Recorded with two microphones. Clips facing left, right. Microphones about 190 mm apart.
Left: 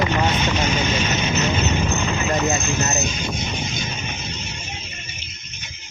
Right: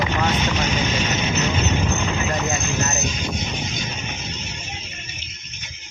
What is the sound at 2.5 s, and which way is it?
Speech, 30° left (ahead or behind).